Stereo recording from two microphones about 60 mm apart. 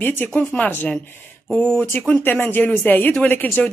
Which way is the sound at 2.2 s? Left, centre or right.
Left.